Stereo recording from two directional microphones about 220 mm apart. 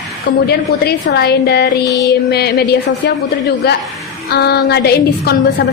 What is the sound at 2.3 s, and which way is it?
A woman's voice, 45° left (ahead or behind).